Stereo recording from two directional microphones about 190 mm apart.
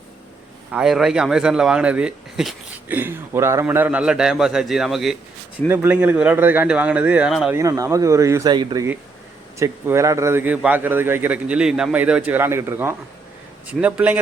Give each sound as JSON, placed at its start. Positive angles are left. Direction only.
{"t": 0.7, "sound": "a man's voice", "side_deg": -5}
{"t": 7.5, "sound": "a man's voice", "side_deg": -15}